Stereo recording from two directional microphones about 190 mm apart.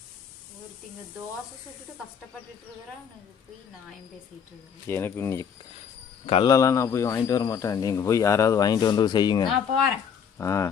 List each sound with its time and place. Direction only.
4.9 s speech: 10° left (ahead or behind)
9.5 s speech: centre (ahead or behind)
10.3 s speech: 15° left (ahead or behind)